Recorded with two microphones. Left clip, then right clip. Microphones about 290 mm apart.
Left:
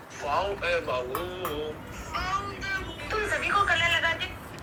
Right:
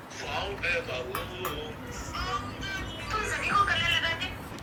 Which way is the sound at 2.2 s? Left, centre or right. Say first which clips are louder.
Left 4 dB; left.